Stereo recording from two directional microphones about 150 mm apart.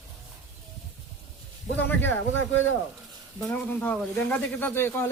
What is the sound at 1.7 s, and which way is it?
Speech, 10° left (ahead or behind).